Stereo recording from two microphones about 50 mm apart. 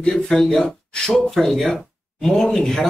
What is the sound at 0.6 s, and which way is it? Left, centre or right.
Speech, centre.